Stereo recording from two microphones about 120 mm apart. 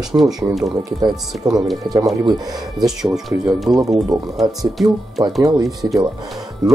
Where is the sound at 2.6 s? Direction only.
5° right (ahead or behind).